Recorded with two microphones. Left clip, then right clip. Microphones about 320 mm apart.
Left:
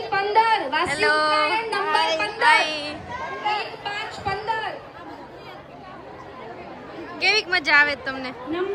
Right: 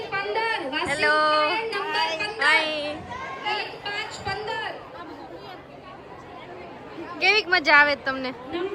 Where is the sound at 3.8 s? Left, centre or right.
Left.